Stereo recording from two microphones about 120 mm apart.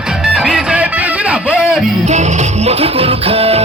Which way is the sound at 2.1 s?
75° right (ahead or behind).